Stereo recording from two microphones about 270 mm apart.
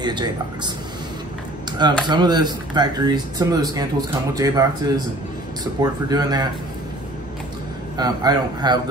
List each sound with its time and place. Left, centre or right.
0.0 s speech: centre
1.7 s speech: centre
8.0 s speech: centre